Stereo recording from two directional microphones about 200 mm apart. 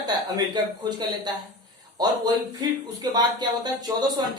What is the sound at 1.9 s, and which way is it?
Speech, 20° right (ahead or behind).